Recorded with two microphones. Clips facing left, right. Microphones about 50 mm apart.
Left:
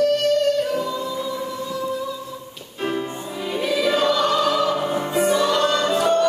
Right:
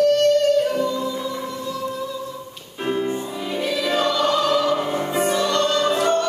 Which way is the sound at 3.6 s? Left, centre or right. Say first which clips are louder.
Left 2 dB; centre.